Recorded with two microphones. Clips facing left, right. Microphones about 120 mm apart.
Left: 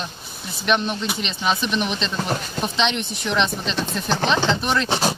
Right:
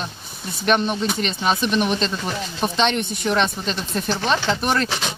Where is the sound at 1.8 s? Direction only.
45° right (ahead or behind).